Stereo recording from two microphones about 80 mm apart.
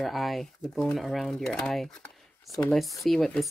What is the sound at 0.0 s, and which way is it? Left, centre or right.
Speech, centre.